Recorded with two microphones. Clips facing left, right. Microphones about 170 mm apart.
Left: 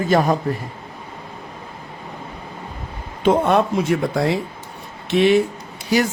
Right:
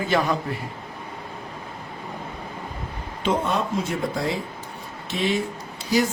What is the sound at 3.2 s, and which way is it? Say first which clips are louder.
Speech: left 8 dB; 60° left (ahead or behind).